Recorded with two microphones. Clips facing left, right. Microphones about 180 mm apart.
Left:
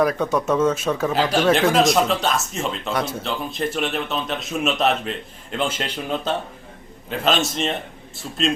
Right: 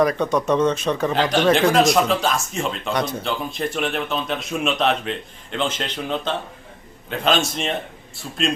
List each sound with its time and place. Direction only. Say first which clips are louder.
0.0 s speech: right 1 dB; 5° left (ahead or behind)